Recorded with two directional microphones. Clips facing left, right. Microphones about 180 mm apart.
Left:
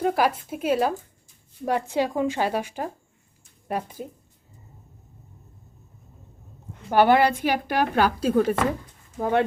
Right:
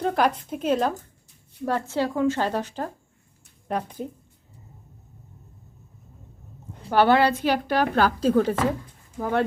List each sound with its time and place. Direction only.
0.0 s a woman's voice: 5° left (ahead or behind)
6.9 s a woman's voice: 15° left (ahead or behind)